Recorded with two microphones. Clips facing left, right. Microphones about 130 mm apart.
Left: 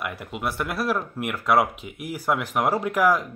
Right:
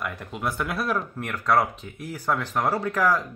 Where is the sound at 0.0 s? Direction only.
5° left (ahead or behind).